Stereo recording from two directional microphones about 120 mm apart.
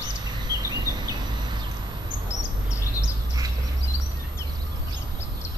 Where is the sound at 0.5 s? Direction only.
35° right (ahead or behind).